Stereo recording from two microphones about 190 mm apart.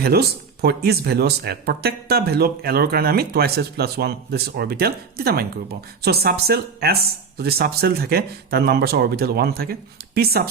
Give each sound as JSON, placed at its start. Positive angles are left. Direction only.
{"t": 0.0, "sound": "speech", "side_deg": -55}